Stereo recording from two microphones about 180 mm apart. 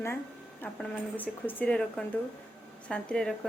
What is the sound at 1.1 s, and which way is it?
Speech, 10° left (ahead or behind).